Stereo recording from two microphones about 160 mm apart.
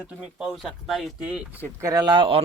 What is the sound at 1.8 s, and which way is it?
Speech, 25° right (ahead or behind).